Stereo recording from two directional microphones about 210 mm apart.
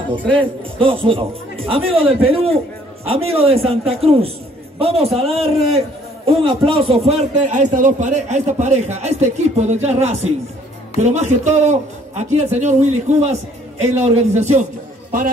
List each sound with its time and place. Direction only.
0.4 s a man's voice: 25° right (ahead or behind); by 15.3 s 40° right (ahead or behind)